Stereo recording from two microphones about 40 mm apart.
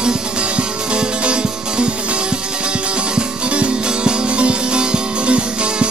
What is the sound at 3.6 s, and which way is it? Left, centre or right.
Music, right.